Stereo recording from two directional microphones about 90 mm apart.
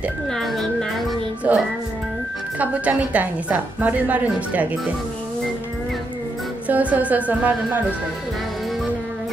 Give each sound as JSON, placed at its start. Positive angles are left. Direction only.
{"t": 0.3, "sound": "speech", "side_deg": 0}
{"t": 1.5, "sound": "a woman's voice", "side_deg": -15}
{"t": 6.7, "sound": "a woman's voice", "side_deg": -15}